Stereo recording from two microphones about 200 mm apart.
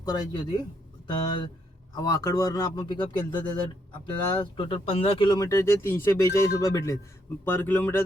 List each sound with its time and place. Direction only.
0.0 s speech: 20° left (ahead or behind)
2.0 s speech: 15° left (ahead or behind)